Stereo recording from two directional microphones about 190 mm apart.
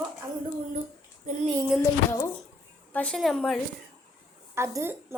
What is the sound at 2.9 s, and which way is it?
Speech, 5° left (ahead or behind).